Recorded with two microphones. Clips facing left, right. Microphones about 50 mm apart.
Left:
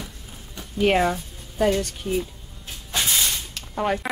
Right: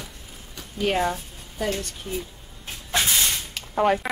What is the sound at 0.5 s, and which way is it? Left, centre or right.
Speech, left.